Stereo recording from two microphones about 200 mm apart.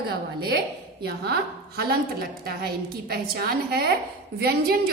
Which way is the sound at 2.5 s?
50° right (ahead or behind).